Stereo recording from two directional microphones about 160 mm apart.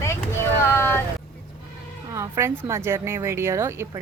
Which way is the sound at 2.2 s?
15° right (ahead or behind).